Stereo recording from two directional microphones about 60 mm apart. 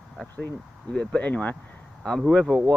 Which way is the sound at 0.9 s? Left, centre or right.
Centre.